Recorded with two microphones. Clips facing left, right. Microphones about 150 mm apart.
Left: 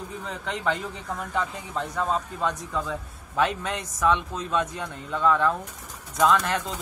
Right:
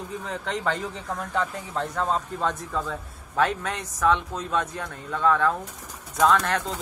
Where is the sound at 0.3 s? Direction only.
10° left (ahead or behind).